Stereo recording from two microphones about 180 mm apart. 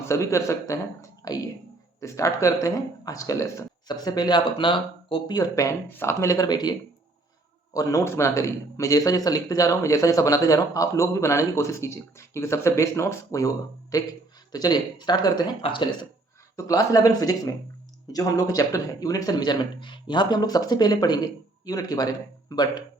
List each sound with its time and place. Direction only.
0.0 s a man's voice: 15° left (ahead or behind)